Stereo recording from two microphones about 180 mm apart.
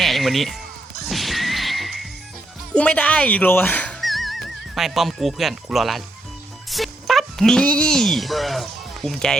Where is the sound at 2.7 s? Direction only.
5° left (ahead or behind).